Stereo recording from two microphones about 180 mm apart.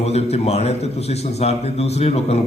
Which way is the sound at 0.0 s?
35° left (ahead or behind).